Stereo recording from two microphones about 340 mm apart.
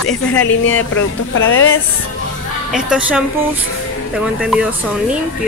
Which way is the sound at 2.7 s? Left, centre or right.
Centre.